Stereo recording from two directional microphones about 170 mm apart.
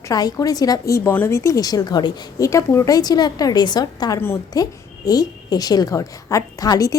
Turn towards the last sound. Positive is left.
turn(degrees=20)  # may be behind; listen again after turning